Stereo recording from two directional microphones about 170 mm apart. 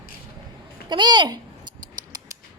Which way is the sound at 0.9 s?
25° right (ahead or behind).